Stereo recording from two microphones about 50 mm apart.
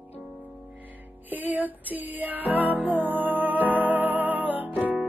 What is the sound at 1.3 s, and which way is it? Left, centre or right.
Music, right.